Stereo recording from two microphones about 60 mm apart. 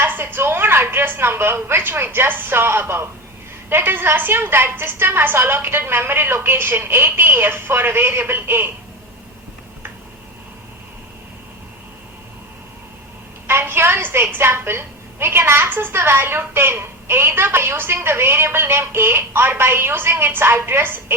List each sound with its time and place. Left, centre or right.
0.0 s a woman's voice: right
13.5 s a woman's voice: right